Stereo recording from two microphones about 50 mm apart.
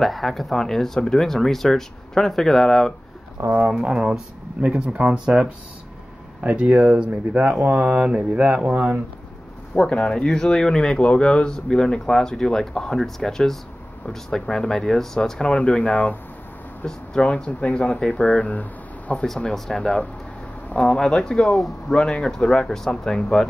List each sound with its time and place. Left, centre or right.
0.0 s speech: centre
3.8 s speech: centre
7.6 s speech: right
8.1 s mantra: centre
8.6 s speech: right
9.8 s speech: centre
15.5 s speech: left
16.8 s speech: centre
17.5 s speech: left
19.5 s speech: centre
21.9 s speech: centre